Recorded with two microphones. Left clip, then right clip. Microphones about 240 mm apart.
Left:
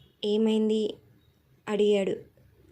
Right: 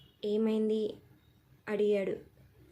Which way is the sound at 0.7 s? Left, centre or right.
Centre.